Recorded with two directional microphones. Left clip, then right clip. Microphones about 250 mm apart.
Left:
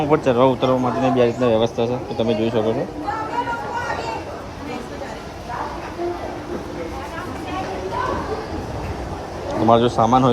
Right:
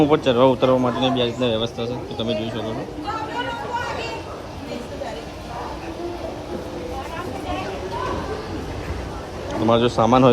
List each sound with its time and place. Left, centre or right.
0.0 s speech: right
1.2 s a man's voice: centre
9.6 s speech: right